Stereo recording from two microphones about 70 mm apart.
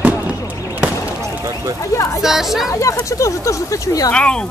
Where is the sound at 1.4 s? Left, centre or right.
Right.